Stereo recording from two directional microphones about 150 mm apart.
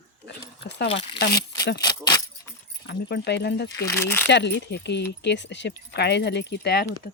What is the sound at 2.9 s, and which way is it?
Speech, 90° left.